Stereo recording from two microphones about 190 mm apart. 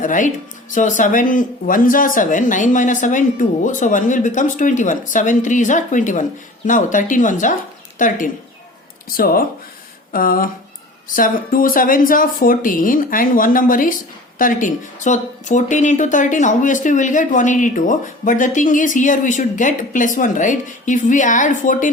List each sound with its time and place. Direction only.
0.0 s speech: 40° left (ahead or behind)